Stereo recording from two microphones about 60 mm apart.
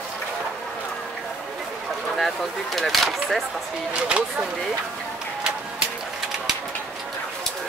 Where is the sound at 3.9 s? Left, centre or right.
Centre.